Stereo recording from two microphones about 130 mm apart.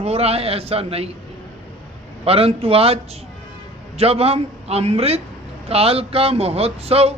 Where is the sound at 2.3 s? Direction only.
50° right (ahead or behind).